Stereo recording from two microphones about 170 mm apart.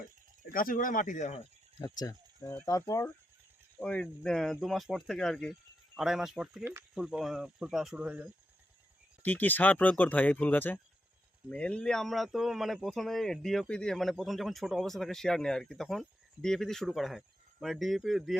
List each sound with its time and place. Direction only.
0.5 s speech: 55° left (ahead or behind)
1.8 s speech: 20° left (ahead or behind)
3.8 s a man's voice: 5° left (ahead or behind)
9.2 s a man's voice: 10° left (ahead or behind)